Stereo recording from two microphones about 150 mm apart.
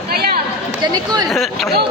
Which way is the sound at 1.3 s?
Centre (ahead or behind).